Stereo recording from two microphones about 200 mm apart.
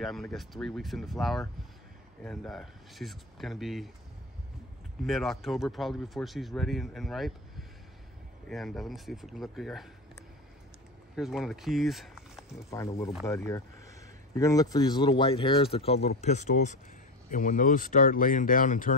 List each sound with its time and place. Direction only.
0.0 s speech: centre (ahead or behind)
5.0 s speech: centre (ahead or behind)
11.1 s speech: centre (ahead or behind)
12.6 s speech: 15° left (ahead or behind); by 18.9 s 40° left (ahead or behind)